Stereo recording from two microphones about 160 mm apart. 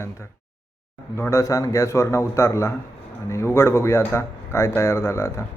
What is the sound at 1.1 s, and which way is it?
Speech, 15° left (ahead or behind).